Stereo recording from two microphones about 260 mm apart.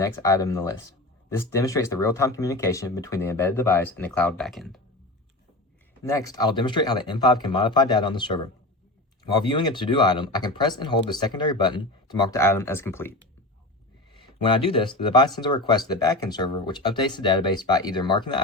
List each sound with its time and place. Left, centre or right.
0.0 s speech: centre
6.0 s speech: centre